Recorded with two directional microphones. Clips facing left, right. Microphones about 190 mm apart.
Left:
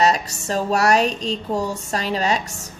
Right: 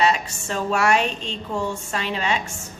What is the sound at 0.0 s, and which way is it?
Speech, 40° left (ahead or behind).